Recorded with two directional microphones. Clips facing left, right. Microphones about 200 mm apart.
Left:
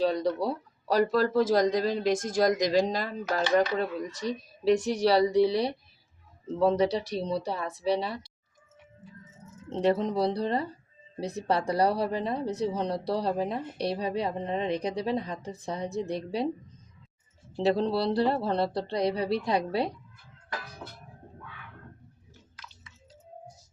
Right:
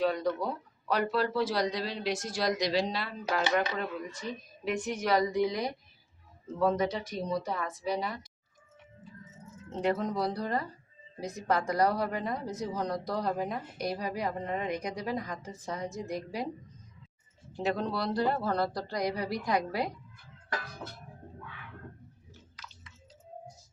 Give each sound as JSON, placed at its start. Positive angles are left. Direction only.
{"t": 0.1, "sound": "speech", "side_deg": 35}
{"t": 9.6, "sound": "speech", "side_deg": 30}
{"t": 17.6, "sound": "speech", "side_deg": 30}